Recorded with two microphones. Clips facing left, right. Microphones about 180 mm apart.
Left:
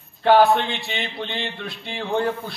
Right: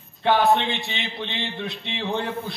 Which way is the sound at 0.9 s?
50° left (ahead or behind).